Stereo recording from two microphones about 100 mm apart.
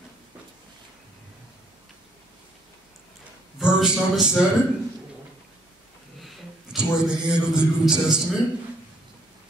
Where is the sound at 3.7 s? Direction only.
5° right (ahead or behind).